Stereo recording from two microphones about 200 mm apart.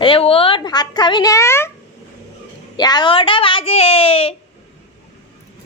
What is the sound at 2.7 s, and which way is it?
A woman's voice, 20° left (ahead or behind).